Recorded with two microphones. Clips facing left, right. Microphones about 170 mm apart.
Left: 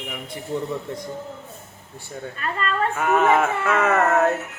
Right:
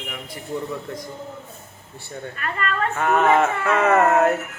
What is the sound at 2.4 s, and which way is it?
Speech, 30° left (ahead or behind).